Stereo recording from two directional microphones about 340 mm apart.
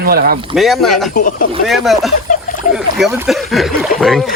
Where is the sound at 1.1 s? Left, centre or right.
Left.